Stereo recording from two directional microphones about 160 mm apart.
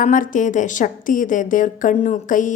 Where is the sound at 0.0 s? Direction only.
55° left (ahead or behind).